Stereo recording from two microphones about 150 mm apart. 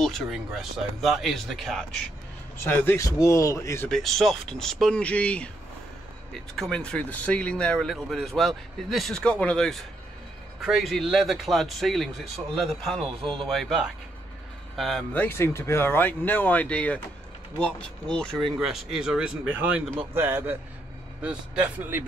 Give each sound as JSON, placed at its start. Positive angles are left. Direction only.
{"t": 0.0, "sound": "speech", "side_deg": 0}
{"t": 2.6, "sound": "a man's voice", "side_deg": 15}
{"t": 3.9, "sound": "speech", "side_deg": 0}
{"t": 13.2, "sound": "speech", "side_deg": -35}
{"t": 13.5, "sound": "speech", "side_deg": 0}
{"t": 15.2, "sound": "a man's voice", "side_deg": 15}